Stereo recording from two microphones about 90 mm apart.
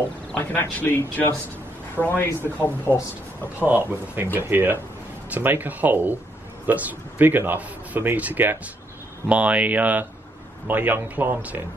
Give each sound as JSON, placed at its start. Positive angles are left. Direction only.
{"t": 0.5, "sound": "speech", "side_deg": 20}
{"t": 3.5, "sound": "a man's voice", "side_deg": -20}